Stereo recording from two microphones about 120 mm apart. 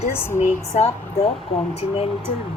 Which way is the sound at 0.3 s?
70° left (ahead or behind).